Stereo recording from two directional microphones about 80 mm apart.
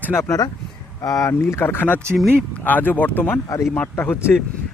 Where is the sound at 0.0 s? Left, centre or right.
Left.